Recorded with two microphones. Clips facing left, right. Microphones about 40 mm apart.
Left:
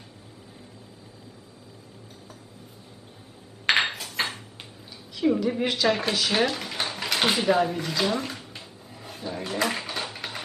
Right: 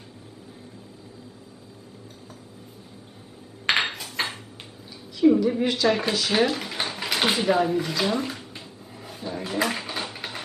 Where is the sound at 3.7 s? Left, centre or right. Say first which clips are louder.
Left 1 dB; centre.